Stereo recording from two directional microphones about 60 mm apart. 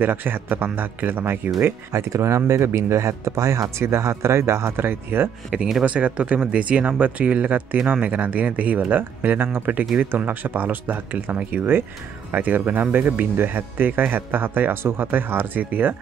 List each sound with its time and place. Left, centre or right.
0.0 s speech: right
1.6 s speech: right
3.8 s speech: right
5.9 s speech: right